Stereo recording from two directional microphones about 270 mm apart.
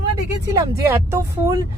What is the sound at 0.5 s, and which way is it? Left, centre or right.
Speech, centre.